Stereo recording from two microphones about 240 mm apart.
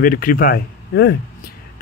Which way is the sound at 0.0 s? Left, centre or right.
Left.